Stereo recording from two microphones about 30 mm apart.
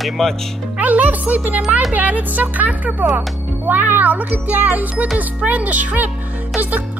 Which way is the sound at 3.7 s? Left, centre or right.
Right.